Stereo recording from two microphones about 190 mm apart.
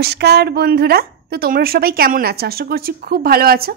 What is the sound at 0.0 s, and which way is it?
A woman's voice, 60° right (ahead or behind).